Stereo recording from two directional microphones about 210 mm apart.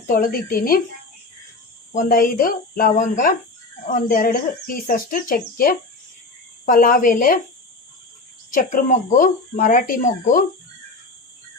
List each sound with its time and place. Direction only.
0.1 s a child's voice: 45° left (ahead or behind)
2.0 s a child's voice: 40° left (ahead or behind)
8.4 s speech: 40° left (ahead or behind)